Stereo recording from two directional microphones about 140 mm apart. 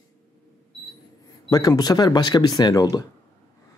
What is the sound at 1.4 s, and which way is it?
Speech, 25° left (ahead or behind).